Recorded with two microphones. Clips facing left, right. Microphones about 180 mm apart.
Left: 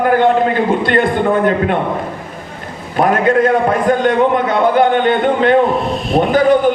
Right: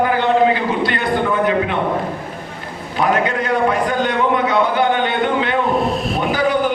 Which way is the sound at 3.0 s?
50° left (ahead or behind).